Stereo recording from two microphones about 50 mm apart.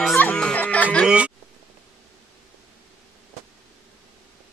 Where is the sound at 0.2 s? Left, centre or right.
Left.